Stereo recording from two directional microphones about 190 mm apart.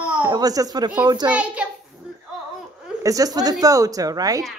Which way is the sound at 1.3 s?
5° right (ahead or behind).